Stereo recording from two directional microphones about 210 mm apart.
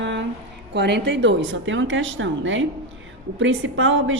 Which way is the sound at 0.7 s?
55° right (ahead or behind).